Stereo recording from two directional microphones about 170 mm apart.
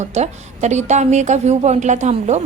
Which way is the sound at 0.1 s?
40° right (ahead or behind).